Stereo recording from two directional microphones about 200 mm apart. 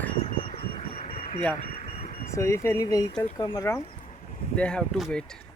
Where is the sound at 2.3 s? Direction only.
15° left (ahead or behind).